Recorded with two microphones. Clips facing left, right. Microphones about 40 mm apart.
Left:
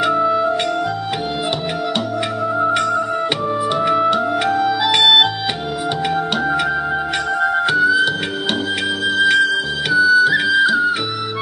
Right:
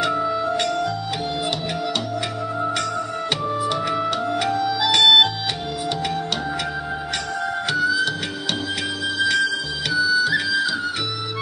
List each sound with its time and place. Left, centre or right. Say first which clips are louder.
0.0 s music: left 6 dB; centre
3.8 s music: left 7 dB; centre
7.4 s music: left 6 dB; left
9.2 s music: left 6 dB; left